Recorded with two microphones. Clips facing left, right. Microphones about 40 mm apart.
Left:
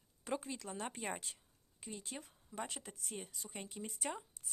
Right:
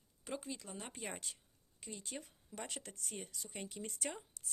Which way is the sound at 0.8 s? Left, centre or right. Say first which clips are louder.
Left 5 dB; left.